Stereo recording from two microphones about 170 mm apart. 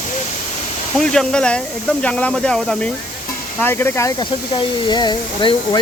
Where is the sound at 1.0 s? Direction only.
5° left (ahead or behind).